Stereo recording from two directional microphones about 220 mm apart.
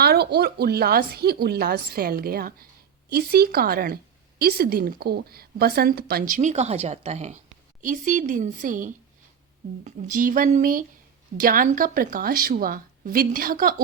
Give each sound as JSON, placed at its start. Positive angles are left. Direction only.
{"t": 0.0, "sound": "a woman's voice", "side_deg": -45}